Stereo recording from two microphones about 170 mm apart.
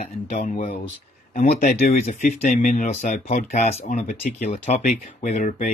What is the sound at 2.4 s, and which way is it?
Speech, 50° left (ahead or behind).